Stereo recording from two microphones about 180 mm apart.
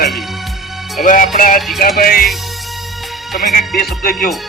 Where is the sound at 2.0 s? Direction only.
55° left (ahead or behind).